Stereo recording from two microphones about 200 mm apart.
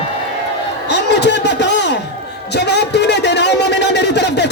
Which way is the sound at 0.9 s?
60° left (ahead or behind).